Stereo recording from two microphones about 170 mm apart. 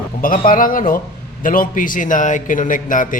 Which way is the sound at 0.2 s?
55° left (ahead or behind).